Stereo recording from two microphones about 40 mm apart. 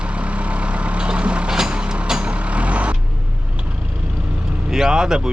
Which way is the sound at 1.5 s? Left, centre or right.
Centre.